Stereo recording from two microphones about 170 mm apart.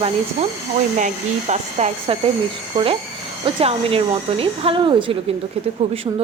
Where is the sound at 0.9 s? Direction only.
45° right (ahead or behind).